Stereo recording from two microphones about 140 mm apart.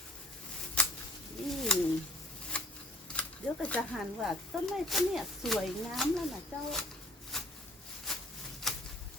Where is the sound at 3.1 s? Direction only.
10° left (ahead or behind).